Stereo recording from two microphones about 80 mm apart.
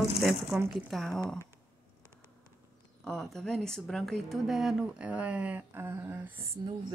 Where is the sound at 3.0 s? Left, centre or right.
Centre.